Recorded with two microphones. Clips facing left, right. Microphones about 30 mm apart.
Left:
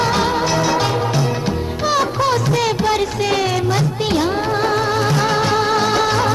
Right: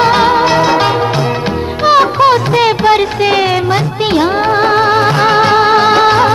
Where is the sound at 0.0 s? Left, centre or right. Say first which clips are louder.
Right 8 dB; right.